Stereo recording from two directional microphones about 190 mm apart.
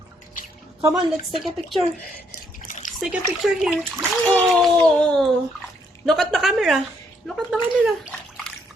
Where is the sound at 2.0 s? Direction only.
45° left (ahead or behind).